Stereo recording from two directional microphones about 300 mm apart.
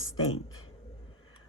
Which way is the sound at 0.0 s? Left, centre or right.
Left.